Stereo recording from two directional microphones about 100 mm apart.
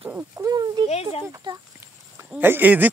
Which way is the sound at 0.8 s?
90° left.